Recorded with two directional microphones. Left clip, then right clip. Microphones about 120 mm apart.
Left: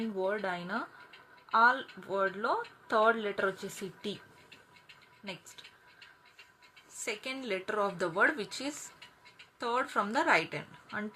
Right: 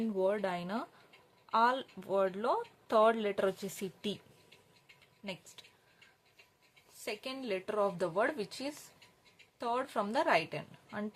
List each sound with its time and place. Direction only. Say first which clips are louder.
0.1 s speech: right 1 dB; 40° right (ahead or behind)
5.2 s speech: left 1 dB; 40° right (ahead or behind)
6.9 s a woman's voice: left 3 dB; 15° right (ahead or behind)